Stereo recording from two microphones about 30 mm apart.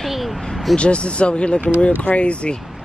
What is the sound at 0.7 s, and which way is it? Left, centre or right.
Speech, left.